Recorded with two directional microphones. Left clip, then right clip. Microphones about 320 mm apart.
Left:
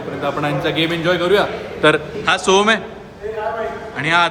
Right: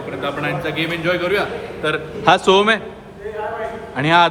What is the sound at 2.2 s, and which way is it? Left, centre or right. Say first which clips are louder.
Speech: right 2 dB; centre.